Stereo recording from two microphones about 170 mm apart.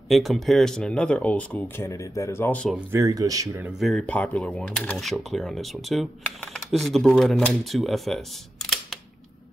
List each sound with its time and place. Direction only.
0.1 s speech: centre (ahead or behind)
2.9 s speech: 20° right (ahead or behind)
3.8 s speech: 5° left (ahead or behind)